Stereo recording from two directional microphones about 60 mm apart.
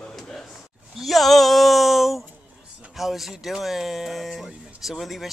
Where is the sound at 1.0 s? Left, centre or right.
Centre.